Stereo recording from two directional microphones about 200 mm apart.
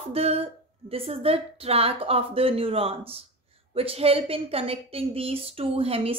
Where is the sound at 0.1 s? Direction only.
30° right (ahead or behind).